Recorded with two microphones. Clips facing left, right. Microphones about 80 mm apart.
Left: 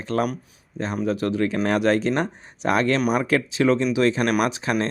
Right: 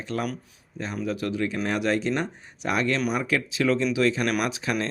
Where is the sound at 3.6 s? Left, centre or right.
Left.